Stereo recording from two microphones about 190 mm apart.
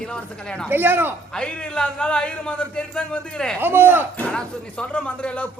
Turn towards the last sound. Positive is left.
turn(degrees=5)  # may be behind; listen again after turning